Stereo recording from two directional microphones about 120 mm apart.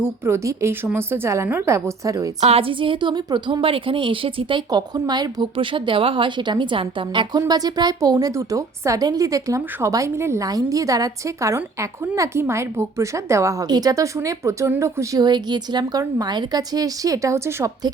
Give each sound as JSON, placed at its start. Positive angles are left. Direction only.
{"t": 0.0, "sound": "a woman's voice", "side_deg": -20}
{"t": 2.4, "sound": "a woman's voice", "side_deg": -55}
{"t": 15.2, "sound": "a woman's voice", "side_deg": -35}